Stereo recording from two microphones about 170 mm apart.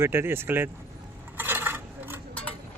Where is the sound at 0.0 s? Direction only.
15° right (ahead or behind).